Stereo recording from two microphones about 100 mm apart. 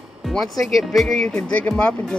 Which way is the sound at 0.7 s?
Centre (ahead or behind).